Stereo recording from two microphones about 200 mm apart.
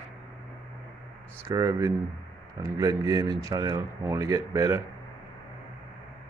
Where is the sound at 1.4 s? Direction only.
15° right (ahead or behind).